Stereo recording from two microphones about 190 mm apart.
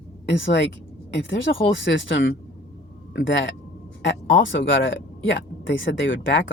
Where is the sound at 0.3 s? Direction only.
70° left (ahead or behind).